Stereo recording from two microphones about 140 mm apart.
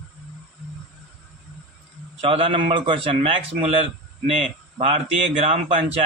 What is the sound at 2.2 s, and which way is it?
A man's voice, 40° right (ahead or behind).